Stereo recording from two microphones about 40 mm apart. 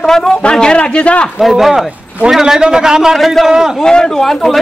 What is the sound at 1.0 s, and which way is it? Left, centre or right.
Speech, left.